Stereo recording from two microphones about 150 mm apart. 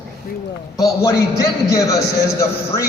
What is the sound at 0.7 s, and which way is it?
A man's voice, 20° left (ahead or behind).